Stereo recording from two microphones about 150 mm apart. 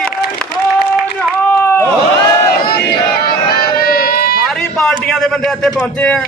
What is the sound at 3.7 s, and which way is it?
Music, 85° left.